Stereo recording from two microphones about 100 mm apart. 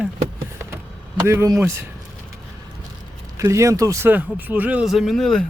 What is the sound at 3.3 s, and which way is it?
Speech, 30° right (ahead or behind).